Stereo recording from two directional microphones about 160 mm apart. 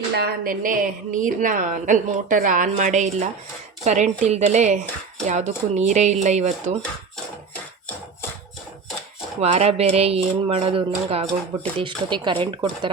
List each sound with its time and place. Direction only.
0.1 s a woman's voice: 75° right (ahead or behind); by 6.7 s 45° right (ahead or behind)
9.4 s speech: 40° right (ahead or behind)